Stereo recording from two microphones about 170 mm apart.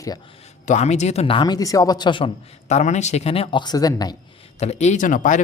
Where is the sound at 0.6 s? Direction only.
45° left (ahead or behind); by 4.1 s 20° left (ahead or behind).